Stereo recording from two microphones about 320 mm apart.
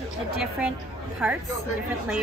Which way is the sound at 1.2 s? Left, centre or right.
Centre.